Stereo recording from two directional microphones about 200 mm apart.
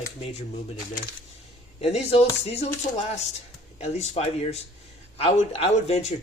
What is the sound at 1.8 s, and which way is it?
Speech, 30° left (ahead or behind).